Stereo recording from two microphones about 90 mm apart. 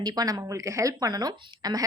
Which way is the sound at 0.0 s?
45° right (ahead or behind).